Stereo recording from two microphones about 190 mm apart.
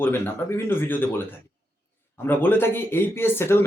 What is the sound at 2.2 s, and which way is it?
Speech, 10° left (ahead or behind).